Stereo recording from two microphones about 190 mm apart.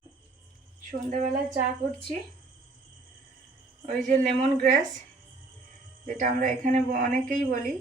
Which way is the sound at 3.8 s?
40° right (ahead or behind).